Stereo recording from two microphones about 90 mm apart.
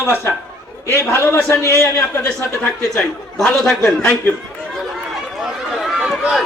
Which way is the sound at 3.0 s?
5° left (ahead or behind).